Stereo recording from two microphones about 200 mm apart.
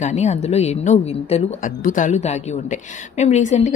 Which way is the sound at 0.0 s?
35° left (ahead or behind).